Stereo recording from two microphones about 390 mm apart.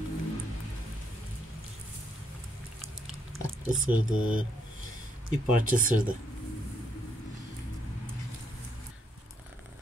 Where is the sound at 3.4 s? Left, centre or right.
Centre.